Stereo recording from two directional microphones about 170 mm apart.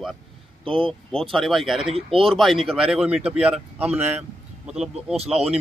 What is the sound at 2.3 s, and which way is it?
Speech, centre (ahead or behind).